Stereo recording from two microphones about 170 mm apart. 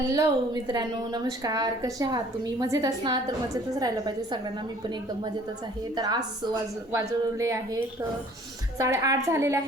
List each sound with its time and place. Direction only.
0.1 s a woman's voice: 25° right (ahead or behind)
6.0 s a woman's voice: 25° right (ahead or behind)